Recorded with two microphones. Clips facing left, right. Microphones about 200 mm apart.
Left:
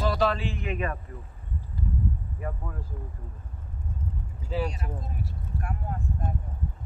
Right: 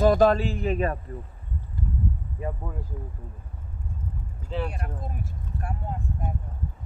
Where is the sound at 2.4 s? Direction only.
25° right (ahead or behind).